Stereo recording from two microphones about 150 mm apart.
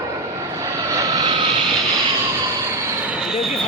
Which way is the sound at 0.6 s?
25° right (ahead or behind).